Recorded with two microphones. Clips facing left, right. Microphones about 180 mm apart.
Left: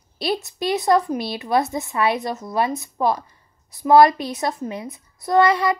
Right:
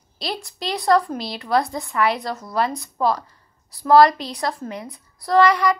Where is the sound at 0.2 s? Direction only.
20° left (ahead or behind).